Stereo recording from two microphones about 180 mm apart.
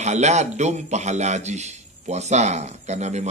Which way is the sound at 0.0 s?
40° right (ahead or behind).